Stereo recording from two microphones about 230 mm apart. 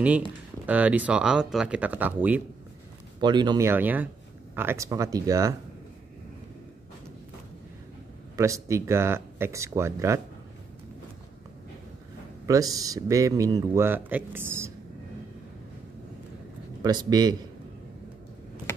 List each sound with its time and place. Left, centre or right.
0.7 s speech: centre
3.2 s speech: centre
8.4 s speech: centre
12.4 s speech: centre
16.8 s speech: centre